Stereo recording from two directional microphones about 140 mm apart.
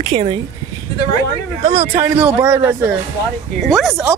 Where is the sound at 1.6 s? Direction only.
50° right (ahead or behind).